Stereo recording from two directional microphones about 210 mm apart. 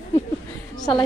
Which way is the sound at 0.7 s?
20° left (ahead or behind).